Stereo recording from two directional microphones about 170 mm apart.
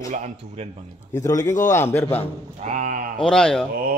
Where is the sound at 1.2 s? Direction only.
20° left (ahead or behind).